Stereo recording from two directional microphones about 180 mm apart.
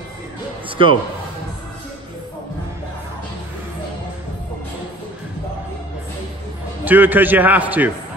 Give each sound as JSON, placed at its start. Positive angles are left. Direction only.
{"t": 0.7, "sound": "music", "side_deg": -30}
{"t": 6.8, "sound": "a man's voice", "side_deg": -10}